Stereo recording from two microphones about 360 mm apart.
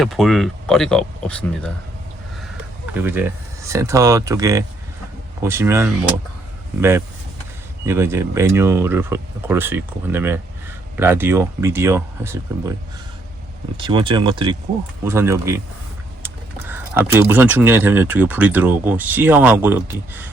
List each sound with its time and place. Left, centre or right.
0.0 s speech: centre
2.9 s speech: centre
7.9 s speech: centre
13.7 s speech: centre